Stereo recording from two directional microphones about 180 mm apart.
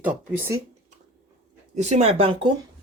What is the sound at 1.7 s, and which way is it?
Speech, 40° right (ahead or behind).